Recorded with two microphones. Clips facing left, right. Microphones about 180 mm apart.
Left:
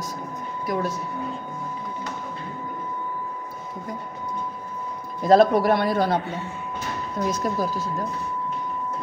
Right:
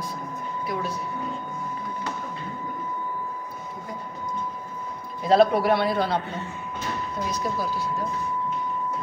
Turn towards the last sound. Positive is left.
turn(degrees=50)  # may be behind; listen again after turning